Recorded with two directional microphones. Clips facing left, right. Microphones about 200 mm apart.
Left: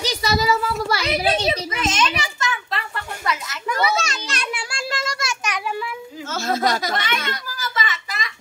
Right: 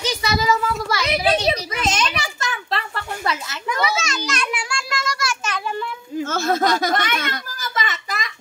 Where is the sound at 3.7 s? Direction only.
35° left (ahead or behind); by 5.6 s 20° left (ahead or behind).